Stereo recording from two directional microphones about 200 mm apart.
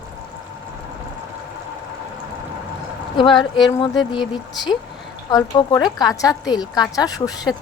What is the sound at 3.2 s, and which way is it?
Speech, 25° left (ahead or behind).